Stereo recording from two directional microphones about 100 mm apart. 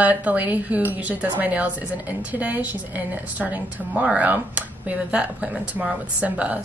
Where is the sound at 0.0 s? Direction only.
15° right (ahead or behind).